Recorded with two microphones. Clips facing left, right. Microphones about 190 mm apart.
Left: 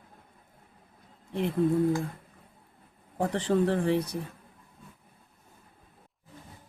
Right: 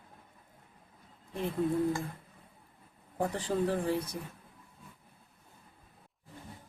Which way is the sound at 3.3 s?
75° left (ahead or behind).